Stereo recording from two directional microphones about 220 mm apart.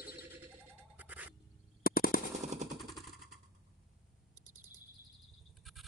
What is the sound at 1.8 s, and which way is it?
Machine gun, 40° left (ahead or behind).